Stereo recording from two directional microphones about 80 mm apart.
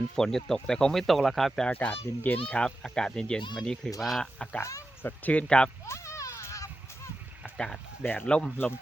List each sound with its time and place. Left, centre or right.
0.2 s speech: centre
1.6 s speech: centre
5.8 s a sound: left
7.5 s speech: centre